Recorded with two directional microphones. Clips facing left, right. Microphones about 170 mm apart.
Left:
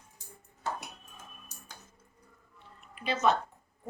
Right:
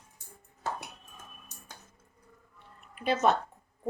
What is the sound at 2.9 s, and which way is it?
Speech, 50° right (ahead or behind).